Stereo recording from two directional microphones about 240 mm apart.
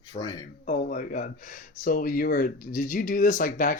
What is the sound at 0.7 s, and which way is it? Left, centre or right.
Speech, left.